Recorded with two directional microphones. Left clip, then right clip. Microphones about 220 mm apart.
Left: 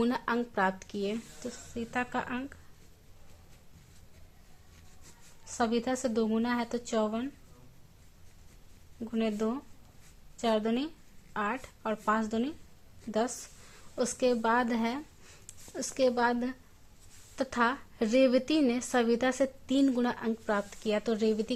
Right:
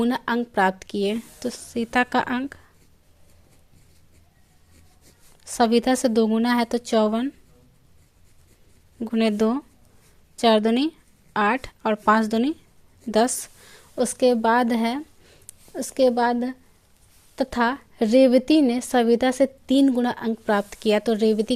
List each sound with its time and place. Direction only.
0.0 s speech: 25° right (ahead or behind)
5.5 s speech: 35° right (ahead or behind)
9.0 s a woman's voice: 40° right (ahead or behind)